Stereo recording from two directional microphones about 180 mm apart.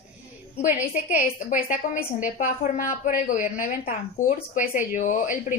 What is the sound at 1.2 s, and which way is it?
Speech, 45° left (ahead or behind).